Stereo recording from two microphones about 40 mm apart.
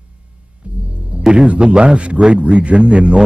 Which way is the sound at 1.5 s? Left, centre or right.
Right.